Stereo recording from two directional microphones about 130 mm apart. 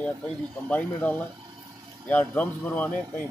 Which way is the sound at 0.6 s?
10° left (ahead or behind).